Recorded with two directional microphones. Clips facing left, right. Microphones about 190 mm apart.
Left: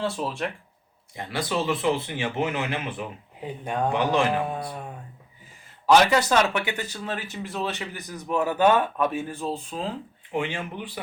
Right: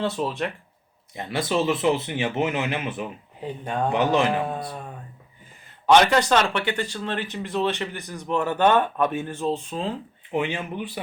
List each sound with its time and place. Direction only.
0.0 s speech: centre (ahead or behind)
1.1 s speech: 25° right (ahead or behind)
3.4 s speech: 10° left (ahead or behind)
3.9 s speech: 20° right (ahead or behind)
5.8 s speech: 5° left (ahead or behind)
10.3 s speech: 20° right (ahead or behind)